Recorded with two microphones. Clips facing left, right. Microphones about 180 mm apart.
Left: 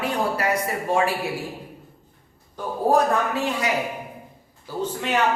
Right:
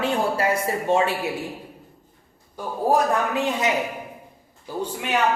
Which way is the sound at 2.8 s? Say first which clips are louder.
Left 1 dB; 15° right (ahead or behind).